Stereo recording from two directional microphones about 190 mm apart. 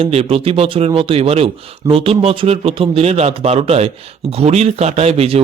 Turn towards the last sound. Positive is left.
turn(degrees=-30)  # may be behind; listen again after turning